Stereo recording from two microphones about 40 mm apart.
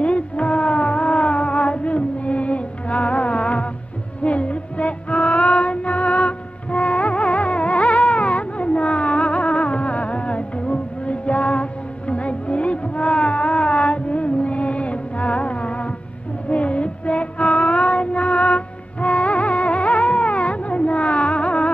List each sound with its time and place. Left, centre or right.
0.0 s music: left
16.4 s child singing: left